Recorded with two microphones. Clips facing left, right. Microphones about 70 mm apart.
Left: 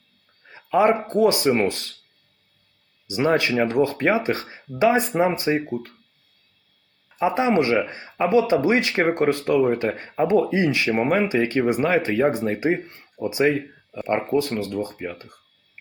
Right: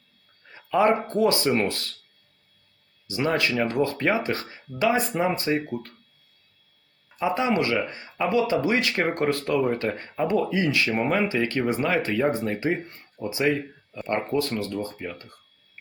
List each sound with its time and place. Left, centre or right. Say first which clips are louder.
0.4 s a sound: left 2 dB; centre
1.0 s speech: left 4 dB; centre
3.1 s speech: left 4 dB; left
7.2 s speech: left 4 dB; left